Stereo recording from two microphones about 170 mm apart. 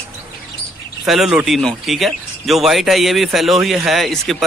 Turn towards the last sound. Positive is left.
turn(degrees=0)  # may be behind; listen again after turning